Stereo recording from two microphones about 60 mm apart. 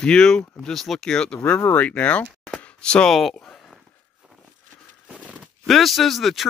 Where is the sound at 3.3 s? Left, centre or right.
Centre.